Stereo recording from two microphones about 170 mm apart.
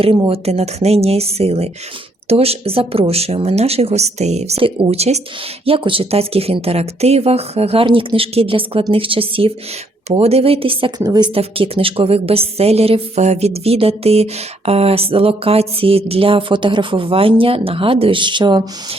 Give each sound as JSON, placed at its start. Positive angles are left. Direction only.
{"t": 0.3, "sound": "a woman's voice", "side_deg": -40}
{"t": 11.3, "sound": "a woman's voice", "side_deg": -35}